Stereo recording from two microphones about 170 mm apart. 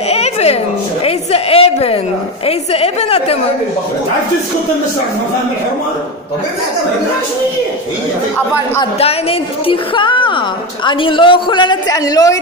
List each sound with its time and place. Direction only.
0.1 s a sound: 40° left (ahead or behind)
2.4 s a woman's voice: 35° left (ahead or behind)
9.0 s a woman's voice: 35° left (ahead or behind)